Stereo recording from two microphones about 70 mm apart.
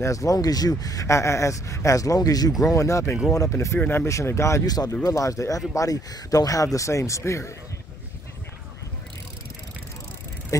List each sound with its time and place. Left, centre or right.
0.0 s speech: left
2.6 s speech: left
4.1 s speech: left
4.6 s speech: left
5.0 s speech: left
10.5 s speech: left